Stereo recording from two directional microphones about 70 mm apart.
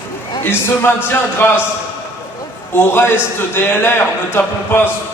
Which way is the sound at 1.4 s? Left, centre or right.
Left.